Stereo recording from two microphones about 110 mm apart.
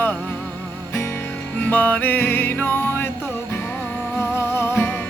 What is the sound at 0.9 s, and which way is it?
Music, 25° left (ahead or behind).